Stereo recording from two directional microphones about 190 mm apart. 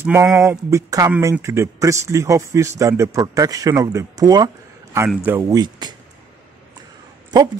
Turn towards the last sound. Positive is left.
turn(degrees=-20)  # may be behind; listen again after turning